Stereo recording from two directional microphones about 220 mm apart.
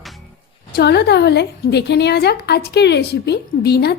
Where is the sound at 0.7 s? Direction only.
50° left (ahead or behind).